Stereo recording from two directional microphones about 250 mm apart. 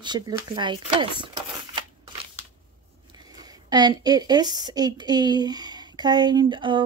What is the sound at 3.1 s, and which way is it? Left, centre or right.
A woman's voice, centre.